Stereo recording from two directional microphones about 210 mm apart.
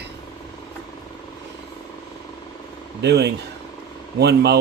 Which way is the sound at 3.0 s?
50° right (ahead or behind).